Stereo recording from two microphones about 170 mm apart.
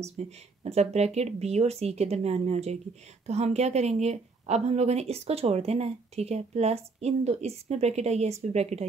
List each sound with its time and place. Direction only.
0.2 s a woman's voice: 40° right (ahead or behind)